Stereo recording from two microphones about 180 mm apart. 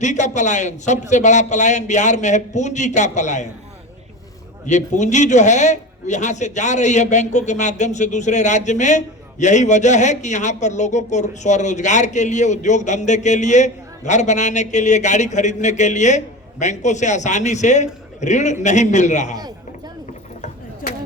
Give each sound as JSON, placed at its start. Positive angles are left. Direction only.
{"t": 0.0, "sound": "a man's voice", "side_deg": 40}
{"t": 4.6, "sound": "a man's voice", "side_deg": 40}
{"t": 20.8, "sound": "a sound", "side_deg": 50}